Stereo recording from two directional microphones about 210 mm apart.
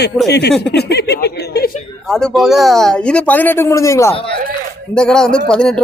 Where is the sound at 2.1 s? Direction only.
Centre (ahead or behind).